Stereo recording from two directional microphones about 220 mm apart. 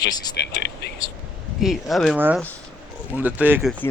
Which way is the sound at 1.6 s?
Centre (ahead or behind).